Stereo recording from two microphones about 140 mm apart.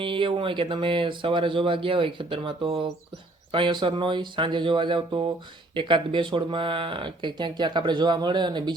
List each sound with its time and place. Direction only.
0.0 s speech: 35° right (ahead or behind)